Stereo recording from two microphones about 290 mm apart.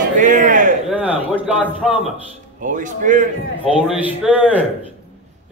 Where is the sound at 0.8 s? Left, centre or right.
Centre.